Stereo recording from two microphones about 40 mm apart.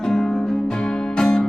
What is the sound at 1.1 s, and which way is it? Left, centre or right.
Music, centre.